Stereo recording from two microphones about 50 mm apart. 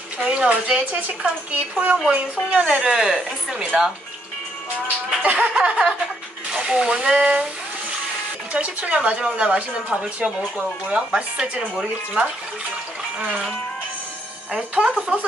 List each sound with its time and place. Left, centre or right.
0.2 s a woman's voice: right
2.8 s a woman's voice: centre
4.8 s speech: right
8.5 s a woman's voice: right
14.5 s a woman's voice: centre